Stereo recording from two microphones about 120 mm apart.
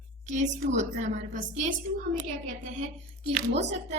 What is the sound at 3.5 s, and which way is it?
Speech, 70° right (ahead or behind).